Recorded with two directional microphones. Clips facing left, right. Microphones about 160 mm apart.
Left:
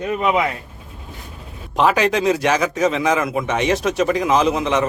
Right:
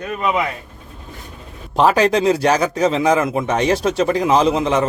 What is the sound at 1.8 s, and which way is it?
Speech, 35° right (ahead or behind).